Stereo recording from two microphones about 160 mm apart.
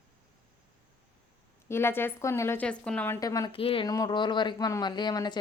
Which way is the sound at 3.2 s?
20° left (ahead or behind).